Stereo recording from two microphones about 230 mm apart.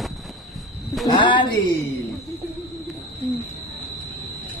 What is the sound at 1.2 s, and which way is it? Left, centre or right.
Speech, left.